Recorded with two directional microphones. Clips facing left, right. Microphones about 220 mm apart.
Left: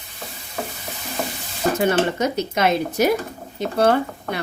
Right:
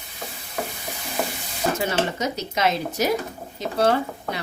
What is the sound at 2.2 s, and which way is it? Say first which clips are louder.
Speech: left 4 dB; 55° left (ahead or behind).